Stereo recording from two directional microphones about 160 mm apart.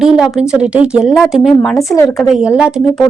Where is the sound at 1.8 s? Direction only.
20° left (ahead or behind).